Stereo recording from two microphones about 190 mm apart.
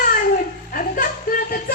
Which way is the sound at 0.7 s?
45° left (ahead or behind).